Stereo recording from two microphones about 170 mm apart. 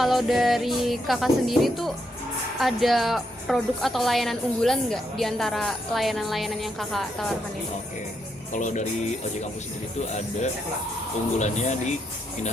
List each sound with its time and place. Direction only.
0.0 s a woman's voice: centre (ahead or behind)
8.5 s speech: 45° left (ahead or behind)
11.3 s speech: 45° left (ahead or behind)